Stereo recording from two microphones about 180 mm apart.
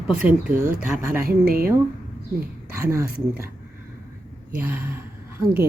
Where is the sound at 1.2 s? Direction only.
55° right (ahead or behind).